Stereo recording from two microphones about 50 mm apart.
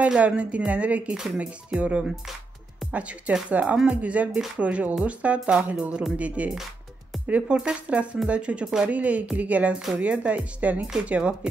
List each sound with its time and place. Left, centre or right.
0.2 s speech: right